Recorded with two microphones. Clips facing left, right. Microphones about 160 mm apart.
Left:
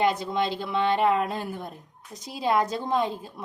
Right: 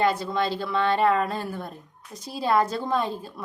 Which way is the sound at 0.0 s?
20° left (ahead or behind).